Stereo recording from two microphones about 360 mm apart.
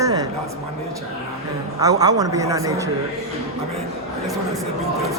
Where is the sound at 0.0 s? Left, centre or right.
Centre.